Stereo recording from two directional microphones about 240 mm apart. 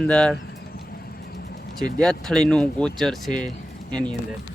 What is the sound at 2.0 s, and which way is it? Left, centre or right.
Speech, centre.